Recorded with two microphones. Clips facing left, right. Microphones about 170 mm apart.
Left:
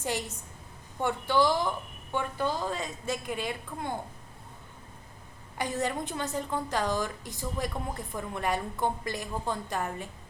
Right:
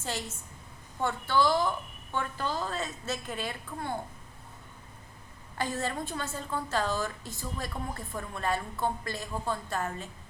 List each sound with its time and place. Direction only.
0.0 s a woman's voice: 15° left (ahead or behind)
5.5 s a woman's voice: 15° left (ahead or behind)